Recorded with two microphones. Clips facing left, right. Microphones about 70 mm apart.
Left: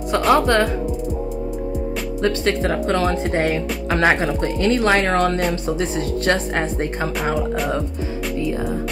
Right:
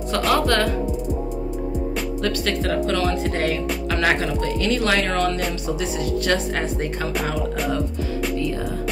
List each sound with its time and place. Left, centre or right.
0.3 s speech: left
2.2 s speech: left